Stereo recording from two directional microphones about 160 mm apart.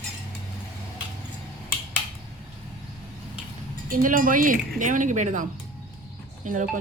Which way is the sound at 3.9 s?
60° right (ahead or behind).